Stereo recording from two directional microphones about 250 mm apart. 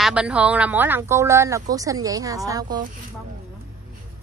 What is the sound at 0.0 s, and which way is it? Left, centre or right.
Speech, centre.